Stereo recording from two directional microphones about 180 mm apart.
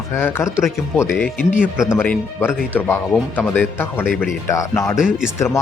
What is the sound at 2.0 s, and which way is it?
Speech, 10° left (ahead or behind).